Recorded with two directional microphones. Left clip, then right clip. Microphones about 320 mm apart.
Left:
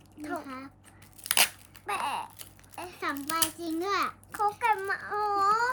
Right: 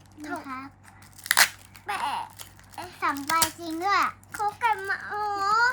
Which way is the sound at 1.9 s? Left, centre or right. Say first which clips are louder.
Right 2 dB; centre.